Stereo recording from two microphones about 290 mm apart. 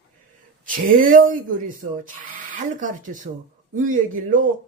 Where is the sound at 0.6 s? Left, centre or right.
Right.